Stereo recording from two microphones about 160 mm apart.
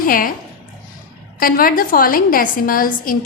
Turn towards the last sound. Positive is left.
turn(degrees=60)  # may be behind; listen again after turning